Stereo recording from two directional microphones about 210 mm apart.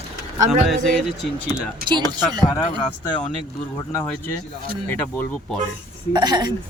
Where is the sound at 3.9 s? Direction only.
10° left (ahead or behind).